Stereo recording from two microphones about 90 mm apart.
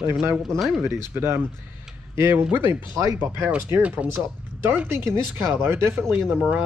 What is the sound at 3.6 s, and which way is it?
Speech, 20° right (ahead or behind).